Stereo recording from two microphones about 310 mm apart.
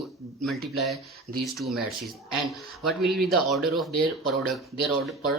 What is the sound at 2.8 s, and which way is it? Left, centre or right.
Speech, centre.